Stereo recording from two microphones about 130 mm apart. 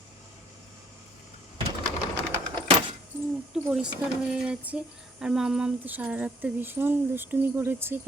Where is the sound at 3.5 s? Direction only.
5° right (ahead or behind).